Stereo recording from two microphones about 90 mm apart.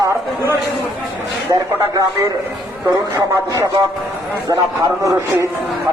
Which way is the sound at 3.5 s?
45° right (ahead or behind).